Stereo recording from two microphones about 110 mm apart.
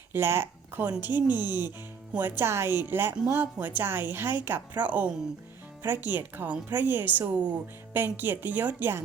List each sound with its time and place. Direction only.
0.1 s speech: 20° right (ahead or behind)